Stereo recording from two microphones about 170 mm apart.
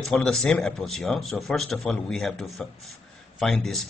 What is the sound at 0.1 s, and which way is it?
Speech, 5° left (ahead or behind).